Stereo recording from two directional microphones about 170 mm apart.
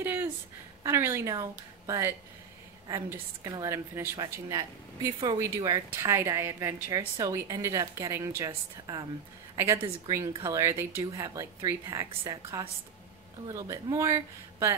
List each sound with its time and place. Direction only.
0.0 s a sound: 10° right (ahead or behind)
0.8 s a woman's voice: 15° right (ahead or behind)
5.9 s a woman's voice: 15° right (ahead or behind); by 10.1 s 30° right (ahead or behind)
10.1 s a woman's voice: 20° right (ahead or behind)